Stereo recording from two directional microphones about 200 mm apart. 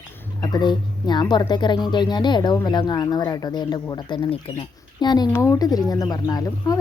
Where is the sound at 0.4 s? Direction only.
20° left (ahead or behind).